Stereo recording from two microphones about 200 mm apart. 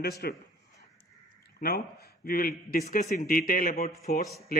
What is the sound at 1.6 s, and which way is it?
A man's voice, 50° left (ahead or behind).